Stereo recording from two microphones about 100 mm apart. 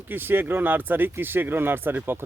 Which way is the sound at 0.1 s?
20° right (ahead or behind).